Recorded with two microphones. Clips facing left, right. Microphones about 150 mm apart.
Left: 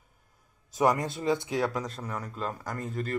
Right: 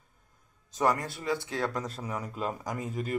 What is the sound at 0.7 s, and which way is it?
Speech, 15° left (ahead or behind).